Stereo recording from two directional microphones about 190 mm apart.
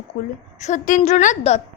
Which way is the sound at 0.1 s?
50° left (ahead or behind).